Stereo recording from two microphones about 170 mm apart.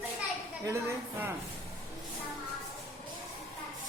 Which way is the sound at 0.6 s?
15° right (ahead or behind).